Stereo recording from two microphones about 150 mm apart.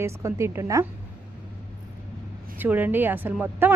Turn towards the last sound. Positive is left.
turn(degrees=-15)  # may be behind; listen again after turning